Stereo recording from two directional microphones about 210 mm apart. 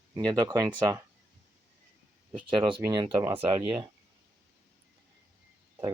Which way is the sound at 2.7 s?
20° right (ahead or behind).